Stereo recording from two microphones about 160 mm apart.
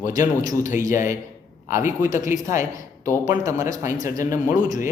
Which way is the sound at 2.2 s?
20° right (ahead or behind).